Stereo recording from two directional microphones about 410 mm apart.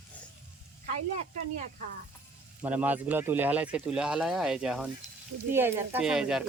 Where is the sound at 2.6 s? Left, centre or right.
Centre.